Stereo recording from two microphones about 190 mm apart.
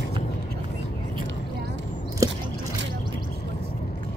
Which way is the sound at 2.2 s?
15° right (ahead or behind).